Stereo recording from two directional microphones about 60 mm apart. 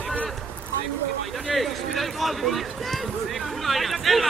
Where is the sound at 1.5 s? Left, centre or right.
Centre.